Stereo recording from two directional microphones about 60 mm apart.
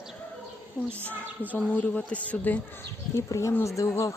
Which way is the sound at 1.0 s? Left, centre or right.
Left.